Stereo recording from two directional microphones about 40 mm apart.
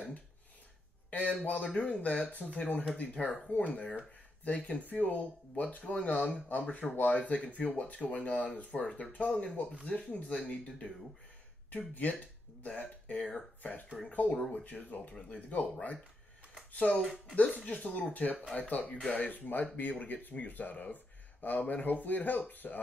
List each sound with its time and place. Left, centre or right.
1.1 s speech: left
1.6 s speech: left
11.9 s speech: left
12.6 s speech: left
17.0 s speech: centre
17.6 s speech: left